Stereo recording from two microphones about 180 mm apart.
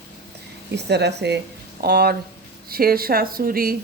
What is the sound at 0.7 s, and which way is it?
Speech, 70° right (ahead or behind).